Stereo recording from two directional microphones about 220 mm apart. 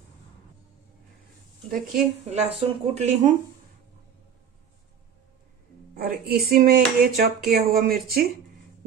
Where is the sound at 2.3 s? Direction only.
30° right (ahead or behind).